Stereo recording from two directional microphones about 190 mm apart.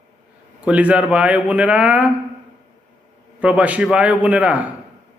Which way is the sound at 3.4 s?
5° right (ahead or behind).